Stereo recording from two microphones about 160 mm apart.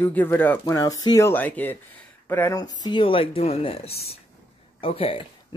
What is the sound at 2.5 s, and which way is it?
Speech, 25° left (ahead or behind).